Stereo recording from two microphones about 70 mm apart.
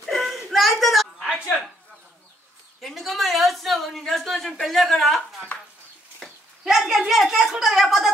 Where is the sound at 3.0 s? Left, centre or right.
Centre.